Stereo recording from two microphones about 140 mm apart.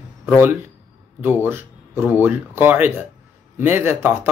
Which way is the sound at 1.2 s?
15° right (ahead or behind).